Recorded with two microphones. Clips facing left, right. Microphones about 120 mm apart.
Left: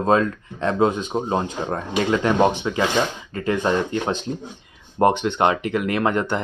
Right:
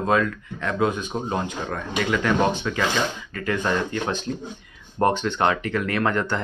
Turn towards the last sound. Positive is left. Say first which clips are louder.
# left 2 dB
turn(degrees=20)  # may be behind; listen again after turning